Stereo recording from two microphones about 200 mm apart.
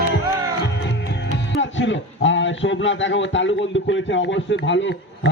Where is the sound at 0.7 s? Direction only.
60° left (ahead or behind).